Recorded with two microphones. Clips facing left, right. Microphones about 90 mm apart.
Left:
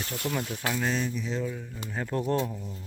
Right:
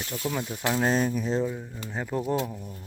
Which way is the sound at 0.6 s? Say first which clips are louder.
Right 7 dB; 35° right (ahead or behind).